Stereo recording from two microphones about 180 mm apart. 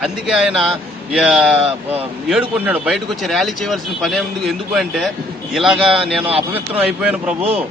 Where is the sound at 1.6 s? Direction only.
35° right (ahead or behind).